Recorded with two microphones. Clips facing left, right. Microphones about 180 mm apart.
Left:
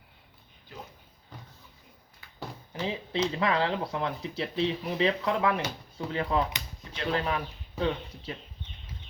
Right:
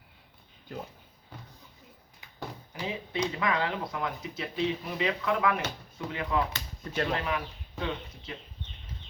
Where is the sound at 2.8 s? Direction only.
30° left (ahead or behind).